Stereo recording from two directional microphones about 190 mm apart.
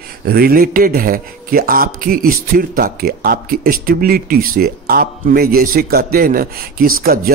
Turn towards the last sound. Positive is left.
turn(degrees=-50)  # may be behind; listen again after turning